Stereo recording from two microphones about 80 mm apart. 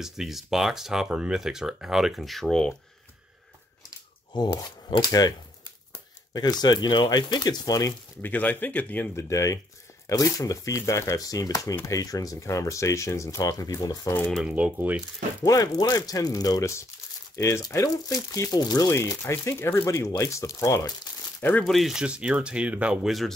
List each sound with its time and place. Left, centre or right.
0.0 s speech: centre
4.3 s speech: left
6.3 s speech: left
8.2 s speech: left
9.1 s speech: left
14.5 s speech: centre
15.4 s speech: left
18.9 s speech: left
21.4 s speech: left
21.6 s speech: centre
23.0 s speech: centre